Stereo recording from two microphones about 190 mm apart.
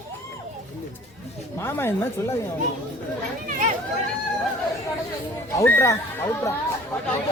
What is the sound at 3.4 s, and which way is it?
Speech, 40° right (ahead or behind).